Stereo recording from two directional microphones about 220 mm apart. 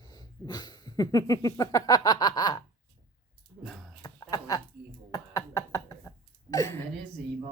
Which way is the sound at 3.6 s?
Centre (ahead or behind).